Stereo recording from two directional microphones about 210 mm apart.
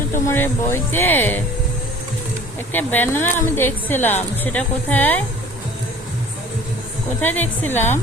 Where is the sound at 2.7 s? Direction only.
10° left (ahead or behind).